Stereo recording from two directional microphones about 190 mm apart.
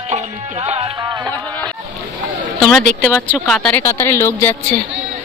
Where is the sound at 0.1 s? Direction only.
35° right (ahead or behind).